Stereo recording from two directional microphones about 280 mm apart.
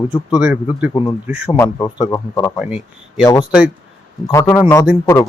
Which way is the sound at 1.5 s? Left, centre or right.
Centre.